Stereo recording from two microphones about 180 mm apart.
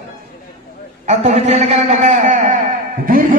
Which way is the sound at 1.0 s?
40° right (ahead or behind).